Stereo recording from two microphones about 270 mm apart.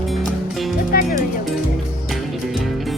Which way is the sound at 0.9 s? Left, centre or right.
Left.